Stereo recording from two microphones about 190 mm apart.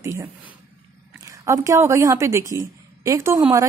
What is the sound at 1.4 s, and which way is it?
A woman's voice, 15° right (ahead or behind).